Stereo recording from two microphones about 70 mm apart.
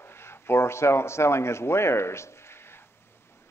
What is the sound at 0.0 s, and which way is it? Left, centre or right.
A man's voice, left.